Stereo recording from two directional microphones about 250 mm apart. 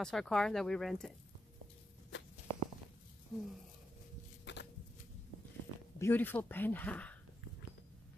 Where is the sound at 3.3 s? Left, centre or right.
Centre.